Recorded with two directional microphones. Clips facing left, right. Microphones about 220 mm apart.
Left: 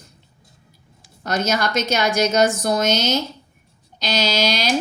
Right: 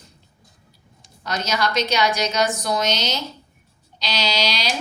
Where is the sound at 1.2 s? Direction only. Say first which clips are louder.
Left 3 dB; 50° left (ahead or behind).